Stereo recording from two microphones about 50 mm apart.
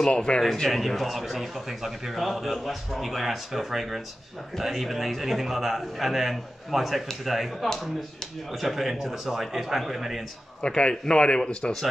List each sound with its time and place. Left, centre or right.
0.1 s a man's voice: left
0.7 s a man's voice: centre
10.6 s a man's voice: centre